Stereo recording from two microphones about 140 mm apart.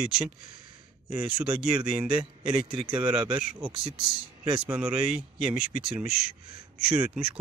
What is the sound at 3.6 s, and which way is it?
Speech, 40° right (ahead or behind).